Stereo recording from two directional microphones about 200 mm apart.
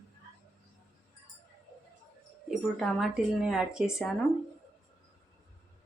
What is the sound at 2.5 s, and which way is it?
Speech, centre (ahead or behind).